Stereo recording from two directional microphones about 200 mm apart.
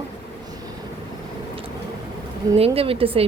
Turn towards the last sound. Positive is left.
turn(degrees=-30)  # may be behind; listen again after turning